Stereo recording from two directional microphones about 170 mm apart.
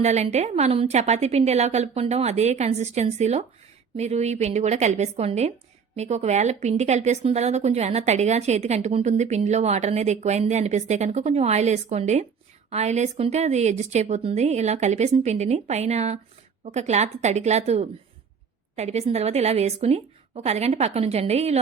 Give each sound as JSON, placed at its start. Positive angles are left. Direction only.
{"t": 0.0, "sound": "speech", "side_deg": -40}